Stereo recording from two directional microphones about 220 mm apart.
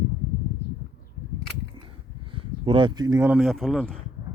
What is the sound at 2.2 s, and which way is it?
Speech, 25° right (ahead or behind).